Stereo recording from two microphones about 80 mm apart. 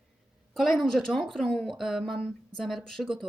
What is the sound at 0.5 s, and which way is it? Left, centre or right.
A woman's voice, centre.